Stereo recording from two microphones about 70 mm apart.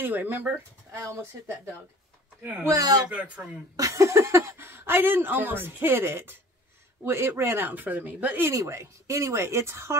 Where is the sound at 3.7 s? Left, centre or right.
Right.